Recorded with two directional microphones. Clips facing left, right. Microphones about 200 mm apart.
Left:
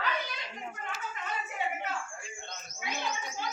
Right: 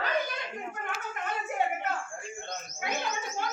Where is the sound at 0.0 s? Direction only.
50° right (ahead or behind).